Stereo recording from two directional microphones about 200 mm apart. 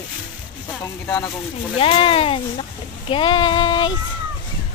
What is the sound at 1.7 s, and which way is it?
Speech, 25° left (ahead or behind).